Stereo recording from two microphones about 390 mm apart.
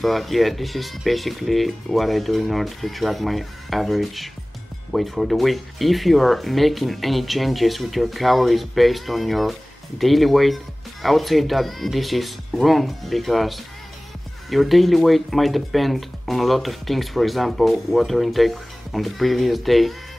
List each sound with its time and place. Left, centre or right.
0.0 s speech: centre